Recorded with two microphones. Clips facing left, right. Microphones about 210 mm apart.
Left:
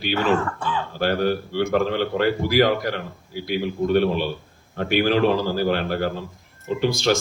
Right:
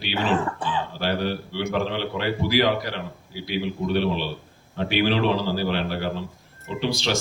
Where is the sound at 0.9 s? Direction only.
50° left (ahead or behind).